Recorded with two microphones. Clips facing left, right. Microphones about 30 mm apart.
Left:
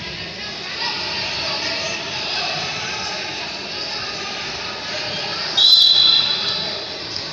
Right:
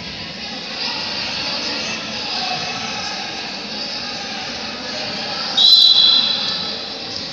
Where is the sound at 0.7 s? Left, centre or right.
Right.